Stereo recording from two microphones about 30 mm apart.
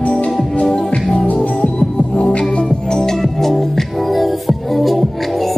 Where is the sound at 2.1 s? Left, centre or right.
Left.